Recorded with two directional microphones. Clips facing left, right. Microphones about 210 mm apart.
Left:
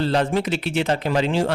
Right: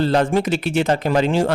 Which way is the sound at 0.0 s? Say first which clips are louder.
Right 3 dB; 45° right (ahead or behind).